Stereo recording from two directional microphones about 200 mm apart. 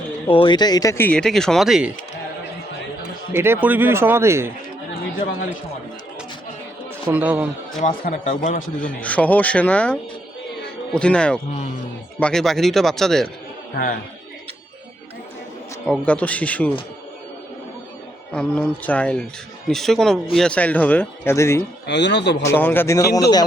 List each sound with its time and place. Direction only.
0.3 s speech: 25° left (ahead or behind); by 1.9 s centre (ahead or behind)
3.3 s speech: 10° right (ahead or behind)
7.1 s speech: 5° right (ahead or behind)
7.8 s speech: 35° left (ahead or behind)
8.8 s speech: 5° left (ahead or behind)
15.9 s speech: 5° left (ahead or behind)
18.3 s speech: 5° left (ahead or behind)
21.8 s speech: 60° left (ahead or behind)
22.4 s speech: 10° left (ahead or behind)